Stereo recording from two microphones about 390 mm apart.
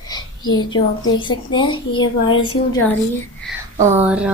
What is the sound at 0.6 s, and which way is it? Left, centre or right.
A woman's voice, centre.